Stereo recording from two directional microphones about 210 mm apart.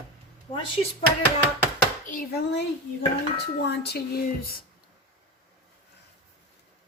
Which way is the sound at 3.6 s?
50° left (ahead or behind).